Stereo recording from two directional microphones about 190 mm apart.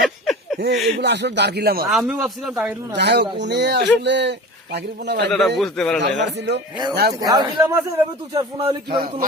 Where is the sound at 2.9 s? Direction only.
60° right (ahead or behind).